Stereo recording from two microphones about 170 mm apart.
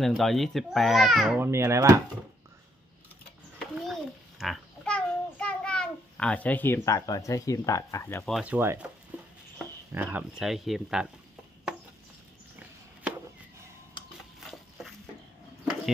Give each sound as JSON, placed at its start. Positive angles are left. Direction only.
{"t": 0.0, "sound": "a child's voice", "side_deg": 0}
{"t": 1.4, "sound": "speech", "side_deg": -15}
{"t": 3.8, "sound": "child singing", "side_deg": 0}
{"t": 8.3, "sound": "speech", "side_deg": -5}
{"t": 9.9, "sound": "a child's voice", "side_deg": -10}
{"t": 14.5, "sound": "a sound", "side_deg": 0}